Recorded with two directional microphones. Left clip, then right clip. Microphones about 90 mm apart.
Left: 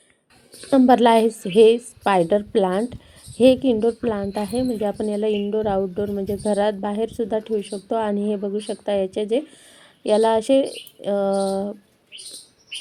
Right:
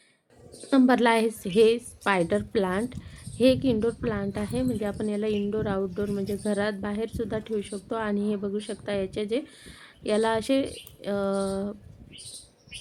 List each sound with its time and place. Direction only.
0.7 s a woman's voice: 30° left (ahead or behind)